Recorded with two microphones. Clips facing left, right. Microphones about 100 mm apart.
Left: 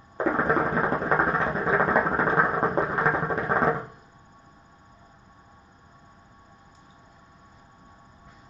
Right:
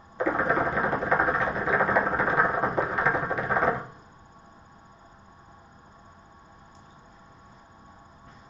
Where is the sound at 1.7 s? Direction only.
35° left (ahead or behind).